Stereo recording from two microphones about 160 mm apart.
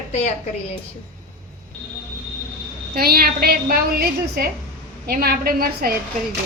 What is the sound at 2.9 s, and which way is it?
A woman's voice, 70° right (ahead or behind).